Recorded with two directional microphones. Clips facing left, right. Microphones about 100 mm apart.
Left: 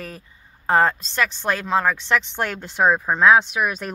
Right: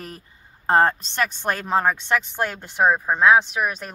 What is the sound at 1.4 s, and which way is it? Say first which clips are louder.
Speech: even; 20° right (ahead or behind).